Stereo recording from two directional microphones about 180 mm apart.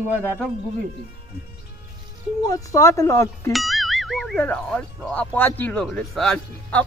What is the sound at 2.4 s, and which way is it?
Speech, 20° left (ahead or behind).